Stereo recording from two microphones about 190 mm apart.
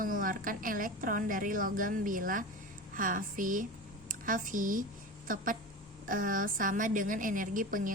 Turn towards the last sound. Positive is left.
turn(degrees=-45)  # may be behind; listen again after turning